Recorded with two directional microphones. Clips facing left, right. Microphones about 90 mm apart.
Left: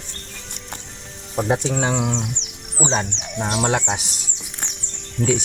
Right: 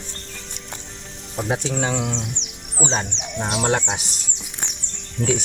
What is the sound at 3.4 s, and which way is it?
Speech, 5° right (ahead or behind).